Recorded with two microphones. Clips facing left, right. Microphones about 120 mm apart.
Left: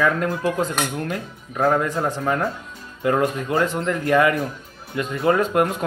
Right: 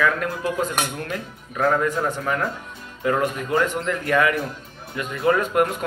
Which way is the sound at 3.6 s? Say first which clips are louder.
Left 1 dB; 25° left (ahead or behind).